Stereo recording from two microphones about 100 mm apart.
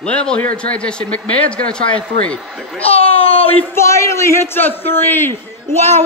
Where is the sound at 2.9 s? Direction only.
75° left (ahead or behind).